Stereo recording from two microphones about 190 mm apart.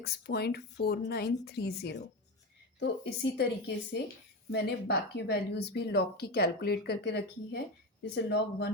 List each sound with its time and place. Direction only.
0.0 s a woman's voice: 55° left (ahead or behind)
4.5 s speech: 60° left (ahead or behind)